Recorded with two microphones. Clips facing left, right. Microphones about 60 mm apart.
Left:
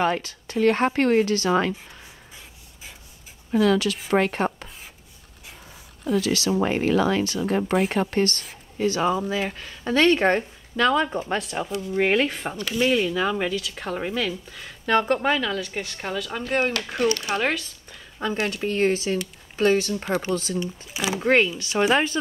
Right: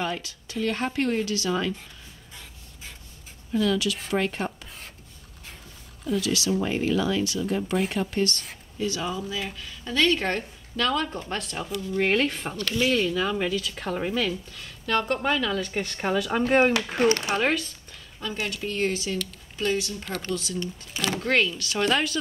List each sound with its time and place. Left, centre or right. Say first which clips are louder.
0.0 s a woman's voice: left 7 dB; left
3.5 s a woman's voice: left 4 dB; left
6.0 s a woman's voice: left 3 dB; left
12.1 s speech: left 2 dB; centre
14.6 s speech: left 5 dB; centre
15.1 s speech: left 2 dB; centre; by 17.4 s right
17.4 s speech: even; centre
18.2 s speech: left 5 dB; left
20.5 s speech: left 3 dB; centre
21.3 s speech: left 5 dB; left